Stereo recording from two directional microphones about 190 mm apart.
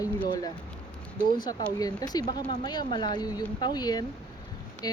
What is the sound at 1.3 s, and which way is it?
Speech, 20° left (ahead or behind).